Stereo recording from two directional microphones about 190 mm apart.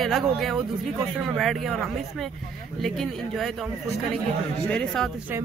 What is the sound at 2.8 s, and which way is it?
Speech, centre (ahead or behind).